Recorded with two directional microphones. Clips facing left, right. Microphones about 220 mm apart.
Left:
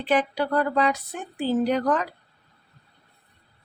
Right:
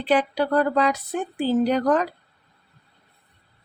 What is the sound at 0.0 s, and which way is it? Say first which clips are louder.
Speech: right 2 dB; 35° right (ahead or behind).